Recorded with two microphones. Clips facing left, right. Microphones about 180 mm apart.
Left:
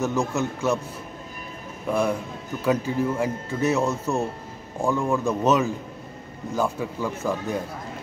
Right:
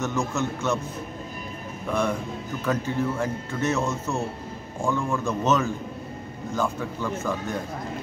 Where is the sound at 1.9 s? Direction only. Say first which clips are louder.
Left 2 dB; 5° left (ahead or behind).